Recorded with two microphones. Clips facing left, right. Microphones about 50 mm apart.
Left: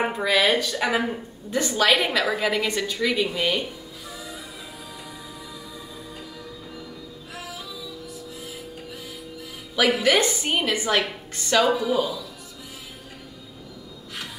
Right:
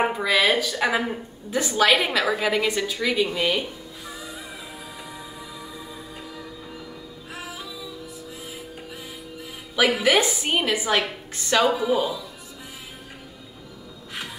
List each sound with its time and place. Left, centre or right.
0.0 s a woman's voice: centre
7.3 s music: right
9.8 s a woman's voice: centre